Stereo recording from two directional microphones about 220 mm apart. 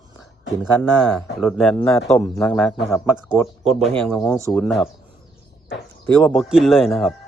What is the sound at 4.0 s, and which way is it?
Speech, 5° left (ahead or behind).